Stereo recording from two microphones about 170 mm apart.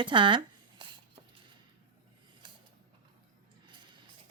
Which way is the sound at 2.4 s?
25° right (ahead or behind).